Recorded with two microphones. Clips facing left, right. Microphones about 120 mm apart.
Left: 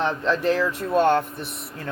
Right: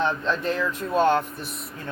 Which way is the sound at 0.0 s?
90° left.